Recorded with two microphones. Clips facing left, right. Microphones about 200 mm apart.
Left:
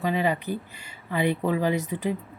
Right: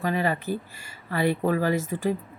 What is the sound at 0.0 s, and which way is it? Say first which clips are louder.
Speech: left 1 dB; 20° left (ahead or behind).